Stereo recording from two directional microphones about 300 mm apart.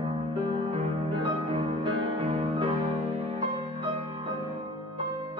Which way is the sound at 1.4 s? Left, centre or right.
Centre.